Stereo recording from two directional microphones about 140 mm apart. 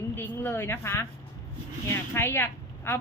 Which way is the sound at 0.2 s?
15° left (ahead or behind).